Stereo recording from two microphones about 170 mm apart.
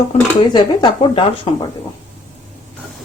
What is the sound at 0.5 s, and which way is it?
Speech, 25° left (ahead or behind).